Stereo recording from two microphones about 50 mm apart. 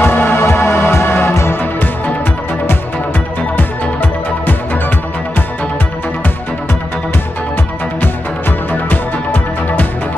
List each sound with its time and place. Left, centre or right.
0.0 s music: left
0.4 s music: left
0.7 s music: left
1.3 s music: left
3.5 s music: left
8.0 s music: left